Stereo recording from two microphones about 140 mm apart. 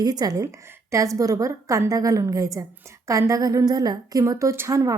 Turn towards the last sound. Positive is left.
turn(degrees=-25)  # may be behind; listen again after turning